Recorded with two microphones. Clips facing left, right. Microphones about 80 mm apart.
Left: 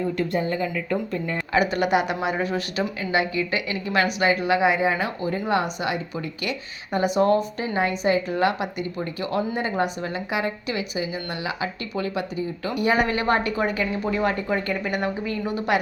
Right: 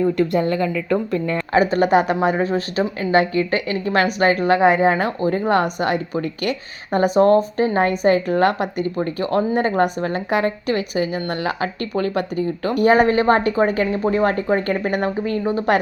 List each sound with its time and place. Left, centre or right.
0.2 s speech: right
1.5 s a woman's voice: right